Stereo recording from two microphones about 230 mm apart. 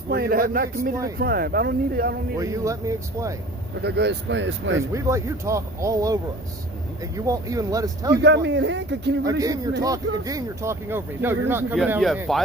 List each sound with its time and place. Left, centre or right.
0.1 s speech: right
2.4 s speech: centre
3.8 s speech: right
4.9 s speech: centre
7.3 s speech: centre
8.2 s speech: right
9.8 s speech: centre